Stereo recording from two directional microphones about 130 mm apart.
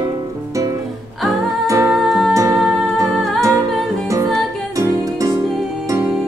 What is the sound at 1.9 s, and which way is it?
Music, centre (ahead or behind).